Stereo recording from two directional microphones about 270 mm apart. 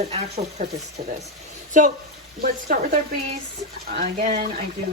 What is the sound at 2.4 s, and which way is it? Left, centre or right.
Speech, right.